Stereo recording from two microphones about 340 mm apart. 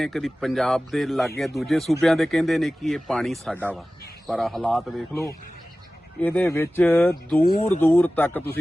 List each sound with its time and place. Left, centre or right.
0.0 s speech: centre
7.4 s speech: centre
7.8 s speech: centre